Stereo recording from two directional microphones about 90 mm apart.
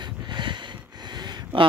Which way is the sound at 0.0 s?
60° right (ahead or behind).